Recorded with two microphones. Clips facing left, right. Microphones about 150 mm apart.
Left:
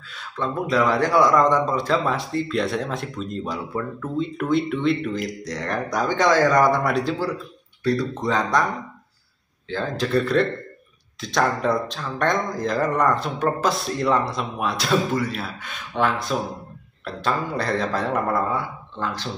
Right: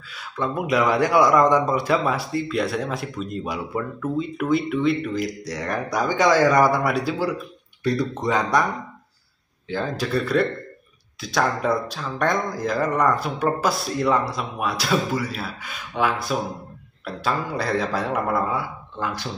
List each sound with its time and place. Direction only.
0.1 s a man's voice: 10° right (ahead or behind)
9.7 s speech: 10° right (ahead or behind)